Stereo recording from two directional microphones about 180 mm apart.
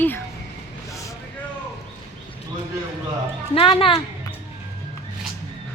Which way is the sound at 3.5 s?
30° left (ahead or behind).